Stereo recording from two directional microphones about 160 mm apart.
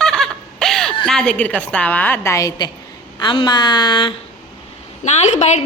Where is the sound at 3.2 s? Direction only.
30° left (ahead or behind).